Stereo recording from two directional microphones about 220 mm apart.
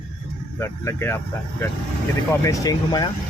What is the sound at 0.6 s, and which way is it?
Speech, 10° left (ahead or behind).